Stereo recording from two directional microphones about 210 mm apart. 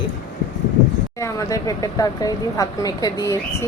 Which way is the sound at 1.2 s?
15° left (ahead or behind).